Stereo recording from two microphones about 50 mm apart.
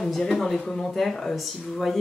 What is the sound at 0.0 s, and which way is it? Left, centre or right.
Speech, centre.